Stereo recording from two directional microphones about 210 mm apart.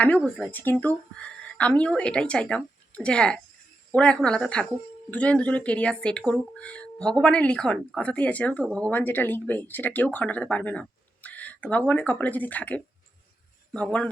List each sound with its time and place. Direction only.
0.0 s speech: centre (ahead or behind)